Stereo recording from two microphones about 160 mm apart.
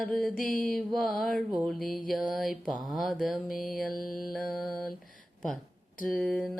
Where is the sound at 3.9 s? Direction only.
65° left (ahead or behind).